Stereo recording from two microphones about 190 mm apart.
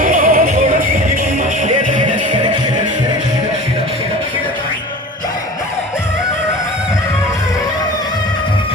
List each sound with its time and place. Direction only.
0.0 s music: 45° right (ahead or behind)
1.6 s music: 40° right (ahead or behind)